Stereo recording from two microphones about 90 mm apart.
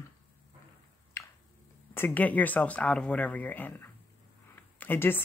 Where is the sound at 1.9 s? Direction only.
20° left (ahead or behind).